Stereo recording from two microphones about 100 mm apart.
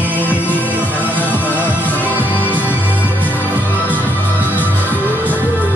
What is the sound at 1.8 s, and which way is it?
Music, 15° left (ahead or behind).